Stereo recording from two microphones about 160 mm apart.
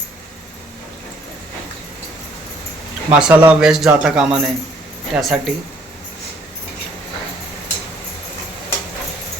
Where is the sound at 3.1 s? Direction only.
5° right (ahead or behind).